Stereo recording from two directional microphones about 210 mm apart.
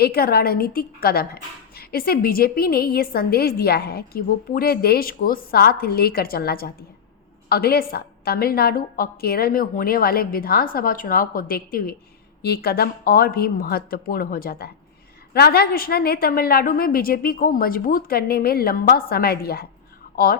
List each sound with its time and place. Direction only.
0.0 s a woman's voice: 45° left (ahead or behind)